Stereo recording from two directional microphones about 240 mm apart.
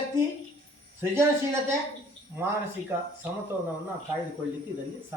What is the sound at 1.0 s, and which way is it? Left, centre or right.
Speech, centre.